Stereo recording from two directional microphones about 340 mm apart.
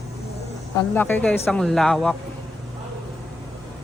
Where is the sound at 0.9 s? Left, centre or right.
Centre.